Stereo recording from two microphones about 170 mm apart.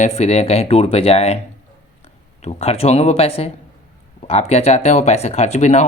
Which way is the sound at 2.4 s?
40° left (ahead or behind).